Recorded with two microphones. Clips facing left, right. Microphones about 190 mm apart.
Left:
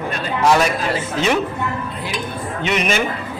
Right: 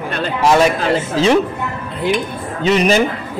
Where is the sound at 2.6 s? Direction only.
35° right (ahead or behind).